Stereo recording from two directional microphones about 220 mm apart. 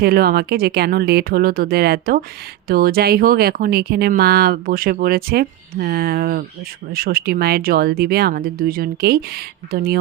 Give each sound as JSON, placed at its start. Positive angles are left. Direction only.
{"t": 0.0, "sound": "speech", "side_deg": -45}